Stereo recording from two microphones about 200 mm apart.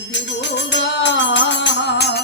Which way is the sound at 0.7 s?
65° left (ahead or behind).